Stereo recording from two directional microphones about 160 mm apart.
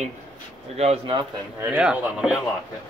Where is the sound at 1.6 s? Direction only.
5° right (ahead or behind).